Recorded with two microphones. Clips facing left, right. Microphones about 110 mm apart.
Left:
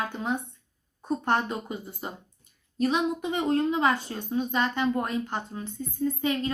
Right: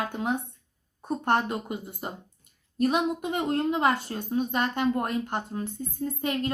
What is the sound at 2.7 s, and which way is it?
Speech, 50° right (ahead or behind).